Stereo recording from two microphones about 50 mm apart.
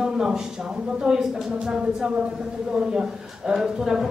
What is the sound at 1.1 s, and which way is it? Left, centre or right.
Speech, right.